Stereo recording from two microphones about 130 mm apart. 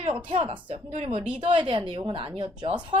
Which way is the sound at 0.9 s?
50° right (ahead or behind).